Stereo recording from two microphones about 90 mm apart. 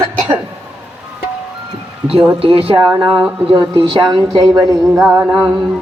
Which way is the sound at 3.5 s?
60° right (ahead or behind).